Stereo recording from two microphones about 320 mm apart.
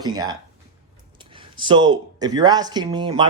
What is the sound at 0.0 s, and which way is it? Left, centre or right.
Speech, centre.